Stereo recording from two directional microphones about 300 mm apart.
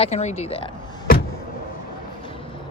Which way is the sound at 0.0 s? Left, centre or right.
Left.